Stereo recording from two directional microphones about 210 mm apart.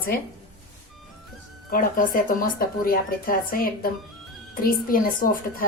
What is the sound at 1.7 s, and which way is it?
A woman's voice, 40° left (ahead or behind).